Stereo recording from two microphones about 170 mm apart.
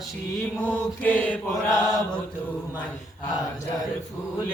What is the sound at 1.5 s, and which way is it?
Mantra, 20° left (ahead or behind).